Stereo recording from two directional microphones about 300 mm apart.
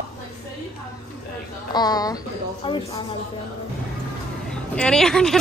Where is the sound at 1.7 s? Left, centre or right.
Centre.